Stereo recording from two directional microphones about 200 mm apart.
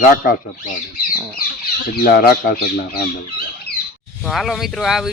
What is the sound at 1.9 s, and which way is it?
Speech, 50° left (ahead or behind).